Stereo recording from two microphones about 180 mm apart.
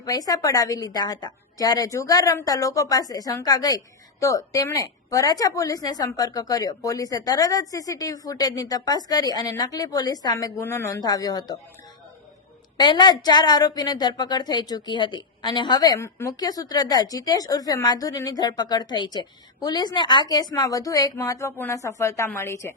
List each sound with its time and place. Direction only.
0.0 s a woman's voice: 20° left (ahead or behind)
12.8 s a woman's voice: 25° left (ahead or behind)